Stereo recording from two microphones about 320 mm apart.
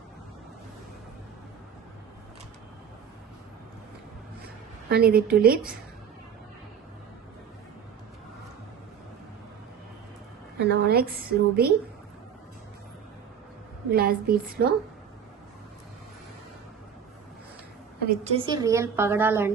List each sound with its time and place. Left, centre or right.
4.9 s a woman's voice: right
10.7 s a woman's voice: right
13.9 s a woman's voice: right
18.0 s a woman's voice: right